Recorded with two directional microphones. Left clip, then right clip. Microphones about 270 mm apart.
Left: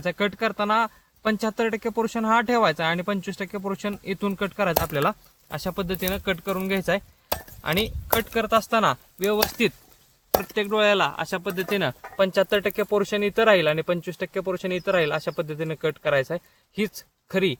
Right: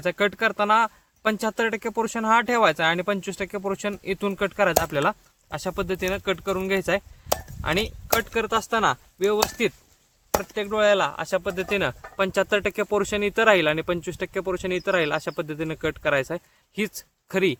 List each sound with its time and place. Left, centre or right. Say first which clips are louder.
0.0 s speech: right 2 dB; right